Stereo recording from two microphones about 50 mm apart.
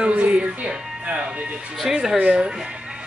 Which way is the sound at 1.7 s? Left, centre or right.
Centre.